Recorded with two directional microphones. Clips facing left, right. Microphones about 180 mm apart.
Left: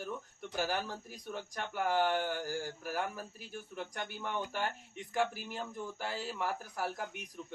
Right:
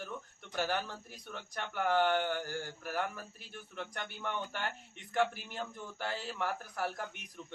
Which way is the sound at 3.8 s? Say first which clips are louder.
Even; 40° left (ahead or behind).